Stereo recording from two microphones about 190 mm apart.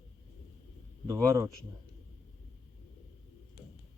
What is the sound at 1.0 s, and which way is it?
Speech, 15° right (ahead or behind).